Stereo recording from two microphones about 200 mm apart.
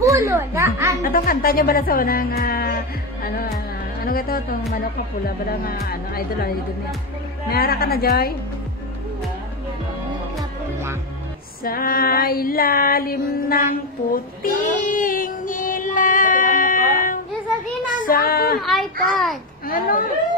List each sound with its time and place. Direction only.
0.0 s a child's voice: 15° right (ahead or behind)
1.0 s speech: 45° left (ahead or behind)
4.0 s female singing: 45° left (ahead or behind)
11.6 s female singing: 45° left (ahead or behind)
14.9 s music: 40° left (ahead or behind)
17.8 s child singing: 40° left (ahead or behind)
18.6 s a child's voice: centre (ahead or behind)
19.7 s female singing: 45° left (ahead or behind)